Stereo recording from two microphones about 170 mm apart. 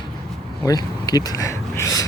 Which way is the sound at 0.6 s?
20° left (ahead or behind).